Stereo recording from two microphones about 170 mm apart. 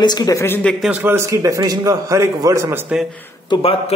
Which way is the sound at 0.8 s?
10° right (ahead or behind).